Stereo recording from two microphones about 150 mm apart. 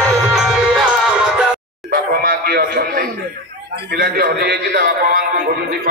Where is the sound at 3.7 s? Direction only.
90° right.